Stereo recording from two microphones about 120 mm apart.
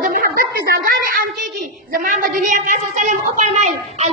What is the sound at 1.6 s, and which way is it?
Speech, 90° right.